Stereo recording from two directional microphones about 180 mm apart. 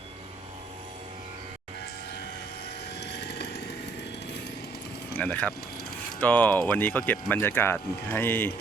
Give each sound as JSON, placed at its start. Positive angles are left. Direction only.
{"t": 3.0, "sound": "vehicle", "side_deg": 70}
{"t": 5.1, "sound": "speech", "side_deg": 10}